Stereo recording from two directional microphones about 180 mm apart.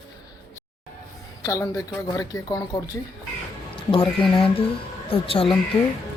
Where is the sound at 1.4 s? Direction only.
15° left (ahead or behind).